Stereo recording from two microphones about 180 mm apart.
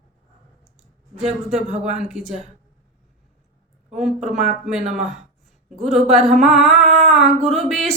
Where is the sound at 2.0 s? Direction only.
5° right (ahead or behind).